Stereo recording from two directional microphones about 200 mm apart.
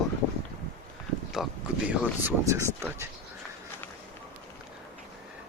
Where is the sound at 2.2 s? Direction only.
15° right (ahead or behind).